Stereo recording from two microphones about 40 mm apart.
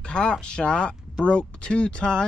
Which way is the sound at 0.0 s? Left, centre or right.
Left.